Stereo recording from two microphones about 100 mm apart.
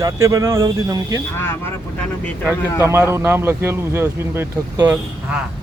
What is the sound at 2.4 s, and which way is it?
Speech, 25° right (ahead or behind).